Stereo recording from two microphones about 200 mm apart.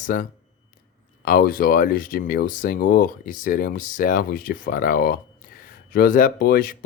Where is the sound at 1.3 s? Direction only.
45° left (ahead or behind).